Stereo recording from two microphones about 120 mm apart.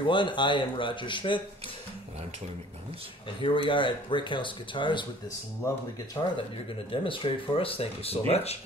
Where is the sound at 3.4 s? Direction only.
45° left (ahead or behind).